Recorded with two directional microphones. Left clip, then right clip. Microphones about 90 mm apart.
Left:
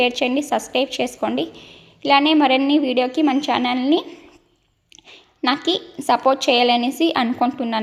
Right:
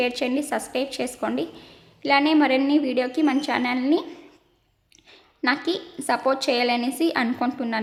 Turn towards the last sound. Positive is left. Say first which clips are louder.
# left 5 dB
turn(degrees=25)  # may be behind; listen again after turning